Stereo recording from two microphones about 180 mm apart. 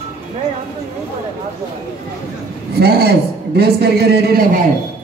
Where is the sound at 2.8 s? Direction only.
65° right (ahead or behind).